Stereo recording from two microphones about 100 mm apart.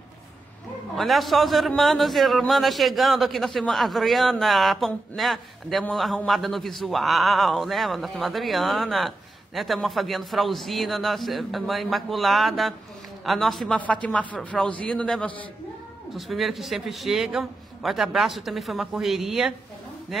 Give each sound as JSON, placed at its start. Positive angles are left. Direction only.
{"t": 0.9, "sound": "a man's voice", "side_deg": 0}
{"t": 14.0, "sound": "speech", "side_deg": 10}
{"t": 16.2, "sound": "a man's voice", "side_deg": 0}